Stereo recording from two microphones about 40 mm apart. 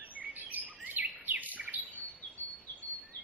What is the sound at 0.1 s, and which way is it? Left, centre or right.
Chirp, right.